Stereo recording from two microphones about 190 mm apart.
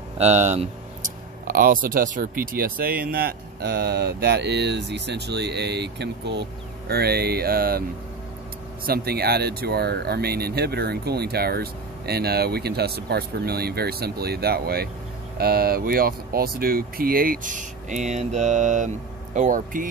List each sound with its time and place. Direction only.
0.2 s speech: 35° right (ahead or behind)
1.5 s speech: 50° right (ahead or behind)
8.8 s speech: 55° right (ahead or behind)